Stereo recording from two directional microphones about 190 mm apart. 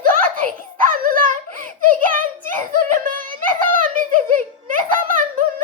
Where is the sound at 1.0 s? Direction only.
45° right (ahead or behind).